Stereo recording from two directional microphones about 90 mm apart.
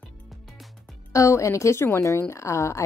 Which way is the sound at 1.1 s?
35° left (ahead or behind).